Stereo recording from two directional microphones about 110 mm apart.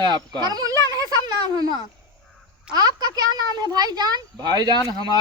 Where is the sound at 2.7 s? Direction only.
35° right (ahead or behind).